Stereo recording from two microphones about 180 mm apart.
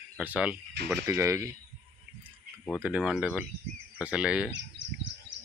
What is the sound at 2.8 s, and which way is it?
Speech, 5° right (ahead or behind).